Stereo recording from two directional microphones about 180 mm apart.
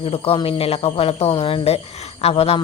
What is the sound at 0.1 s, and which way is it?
Speech, 30° left (ahead or behind).